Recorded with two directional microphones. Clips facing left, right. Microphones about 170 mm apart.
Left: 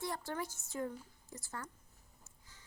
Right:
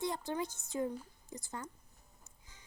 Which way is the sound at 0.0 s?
20° right (ahead or behind).